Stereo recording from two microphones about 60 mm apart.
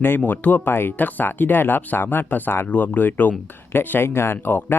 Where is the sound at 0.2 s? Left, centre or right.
Left.